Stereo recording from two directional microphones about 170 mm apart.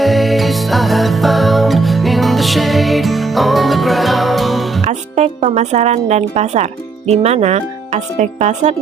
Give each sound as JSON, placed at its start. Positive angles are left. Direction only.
{"t": 0.0, "sound": "music", "side_deg": 0}
{"t": 4.8, "sound": "speech", "side_deg": -40}